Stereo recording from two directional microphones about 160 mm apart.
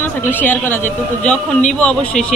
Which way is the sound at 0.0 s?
10° left (ahead or behind).